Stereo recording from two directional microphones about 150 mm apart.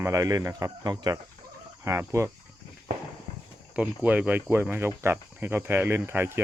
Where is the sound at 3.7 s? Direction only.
10° right (ahead or behind).